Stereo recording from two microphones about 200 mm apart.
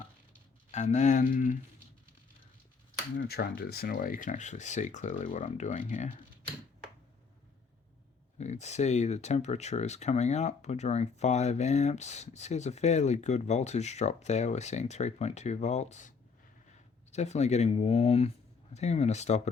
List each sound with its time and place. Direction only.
0.7 s speech: 35° left (ahead or behind)
3.2 s speech: 50° left (ahead or behind)
8.4 s speech: 35° left (ahead or behind)